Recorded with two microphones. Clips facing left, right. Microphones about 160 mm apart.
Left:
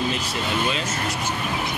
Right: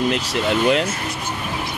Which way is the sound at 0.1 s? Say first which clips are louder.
Right 6 dB; 70° right (ahead or behind).